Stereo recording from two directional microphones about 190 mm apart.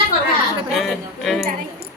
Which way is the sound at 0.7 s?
Centre (ahead or behind).